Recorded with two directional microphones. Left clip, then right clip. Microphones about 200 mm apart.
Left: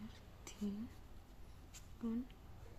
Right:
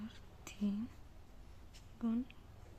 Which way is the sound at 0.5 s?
30° right (ahead or behind).